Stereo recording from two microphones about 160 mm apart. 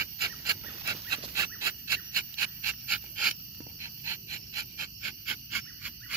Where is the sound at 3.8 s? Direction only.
15° right (ahead or behind).